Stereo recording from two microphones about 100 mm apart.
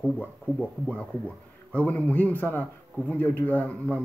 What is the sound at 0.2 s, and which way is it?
Speech, 15° left (ahead or behind).